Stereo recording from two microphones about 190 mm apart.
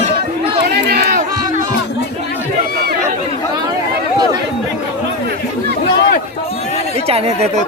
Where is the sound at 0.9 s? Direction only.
50° right (ahead or behind).